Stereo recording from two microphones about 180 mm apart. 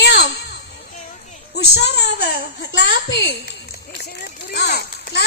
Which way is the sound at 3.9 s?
60° left (ahead or behind).